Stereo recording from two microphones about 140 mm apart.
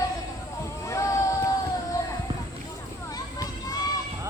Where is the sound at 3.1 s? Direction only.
25° left (ahead or behind).